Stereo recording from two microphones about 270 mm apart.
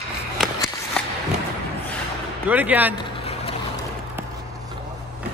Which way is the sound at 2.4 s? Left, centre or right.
Centre.